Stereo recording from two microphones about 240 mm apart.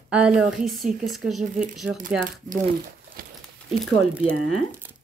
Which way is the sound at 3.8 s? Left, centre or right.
Centre.